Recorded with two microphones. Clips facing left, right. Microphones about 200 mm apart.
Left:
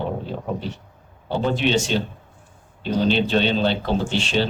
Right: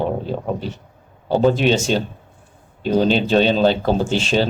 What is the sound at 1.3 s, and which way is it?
A man's voice, 40° right (ahead or behind).